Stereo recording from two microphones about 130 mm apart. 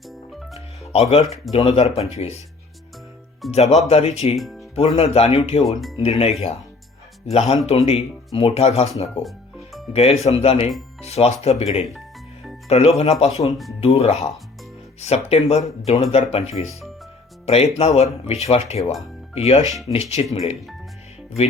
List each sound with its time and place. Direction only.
0.9 s speech: 50° left (ahead or behind)
3.5 s speech: 55° left (ahead or behind)
4.4 s speech: centre (ahead or behind)
4.7 s speech: 50° left (ahead or behind)
9.9 s speech: 50° left (ahead or behind)
18.8 s speech: centre (ahead or behind)
19.3 s speech: 50° left (ahead or behind)